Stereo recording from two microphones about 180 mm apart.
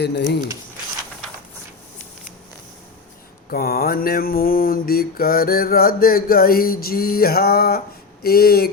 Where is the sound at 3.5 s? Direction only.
60° left (ahead or behind).